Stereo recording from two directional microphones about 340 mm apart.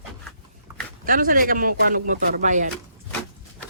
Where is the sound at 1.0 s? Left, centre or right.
Right.